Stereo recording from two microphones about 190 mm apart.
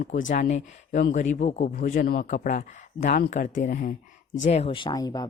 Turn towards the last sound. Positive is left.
turn(degrees=20)  # may be behind; listen again after turning